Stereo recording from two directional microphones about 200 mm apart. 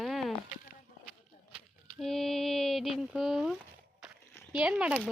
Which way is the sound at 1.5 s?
Centre (ahead or behind).